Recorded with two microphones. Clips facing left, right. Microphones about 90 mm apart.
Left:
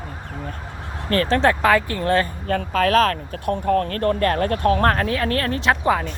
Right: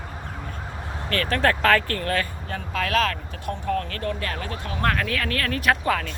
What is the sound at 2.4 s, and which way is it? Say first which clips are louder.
Speech: left 8 dB; 50° left (ahead or behind).